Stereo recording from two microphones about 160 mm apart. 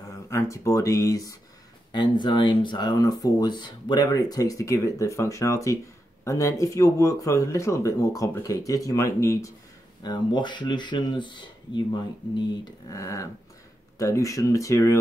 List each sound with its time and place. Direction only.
0.1 s speech: 20° left (ahead or behind)